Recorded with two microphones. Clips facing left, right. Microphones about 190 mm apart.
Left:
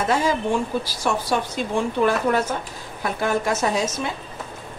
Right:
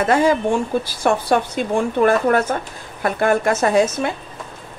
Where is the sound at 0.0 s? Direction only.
55° right (ahead or behind).